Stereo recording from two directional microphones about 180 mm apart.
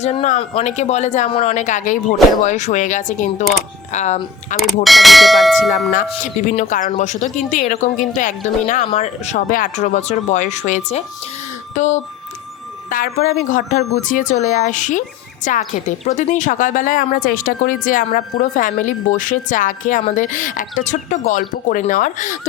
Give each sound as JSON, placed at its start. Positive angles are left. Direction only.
{"t": 0.0, "sound": "a woman's voice", "side_deg": 35}
{"t": 4.6, "sound": "speech", "side_deg": 0}
{"t": 5.9, "sound": "a woman's voice", "side_deg": 45}